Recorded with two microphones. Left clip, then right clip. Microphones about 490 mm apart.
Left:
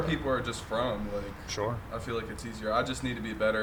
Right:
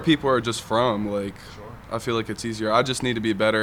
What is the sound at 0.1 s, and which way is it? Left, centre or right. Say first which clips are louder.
Speech: right 10 dB; right.